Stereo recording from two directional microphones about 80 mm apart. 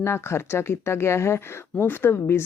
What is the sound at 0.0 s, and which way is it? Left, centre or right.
A woman's voice, left.